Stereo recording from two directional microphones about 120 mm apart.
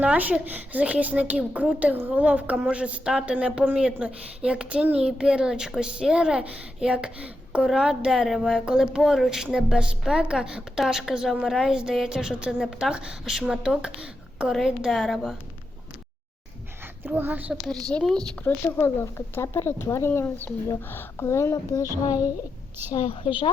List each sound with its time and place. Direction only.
0.0 s a child's voice: 10° right (ahead or behind)
17.0 s a woman's voice: 15° right (ahead or behind)
17.9 s a child's voice: 5° left (ahead or behind)
18.8 s speech: 20° left (ahead or behind)